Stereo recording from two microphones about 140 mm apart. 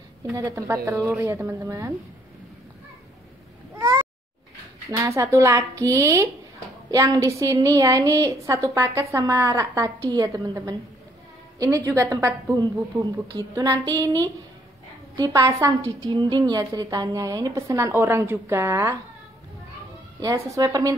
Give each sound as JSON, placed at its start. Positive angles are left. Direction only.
{"t": 0.3, "sound": "a woman's voice", "side_deg": -20}
{"t": 3.7, "sound": "babbling", "side_deg": -25}
{"t": 4.9, "sound": "a woman's voice", "side_deg": -20}
{"t": 20.2, "sound": "a woman's voice", "side_deg": -25}